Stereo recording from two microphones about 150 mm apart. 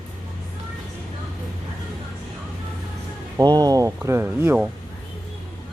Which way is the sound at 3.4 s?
25° right (ahead or behind).